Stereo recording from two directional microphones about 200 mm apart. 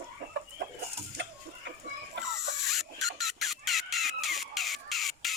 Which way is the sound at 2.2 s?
Centre (ahead or behind).